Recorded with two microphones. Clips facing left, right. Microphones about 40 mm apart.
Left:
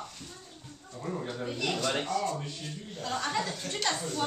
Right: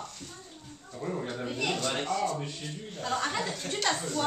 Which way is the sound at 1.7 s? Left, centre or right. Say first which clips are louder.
Left 1 dB; centre.